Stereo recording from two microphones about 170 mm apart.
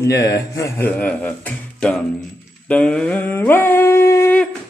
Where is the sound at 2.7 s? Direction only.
5° left (ahead or behind).